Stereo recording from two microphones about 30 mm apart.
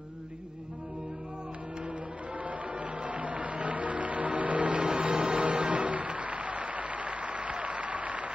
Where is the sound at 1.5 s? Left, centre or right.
Right.